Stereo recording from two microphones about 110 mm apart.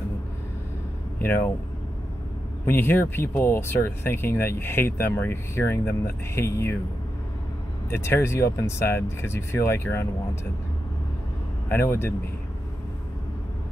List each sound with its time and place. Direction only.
1.2 s speech: 15° left (ahead or behind)
2.6 s speech: 20° left (ahead or behind)
7.9 s speech: 25° left (ahead or behind)
11.7 s speech: 20° left (ahead or behind)